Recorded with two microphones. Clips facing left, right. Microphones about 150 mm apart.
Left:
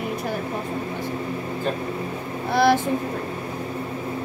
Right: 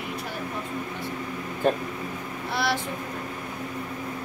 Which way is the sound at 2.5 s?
50° left (ahead or behind).